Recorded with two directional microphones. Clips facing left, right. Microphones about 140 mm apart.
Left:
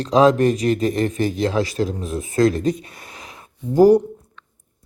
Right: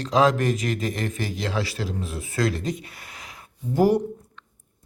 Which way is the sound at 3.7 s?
40° left (ahead or behind).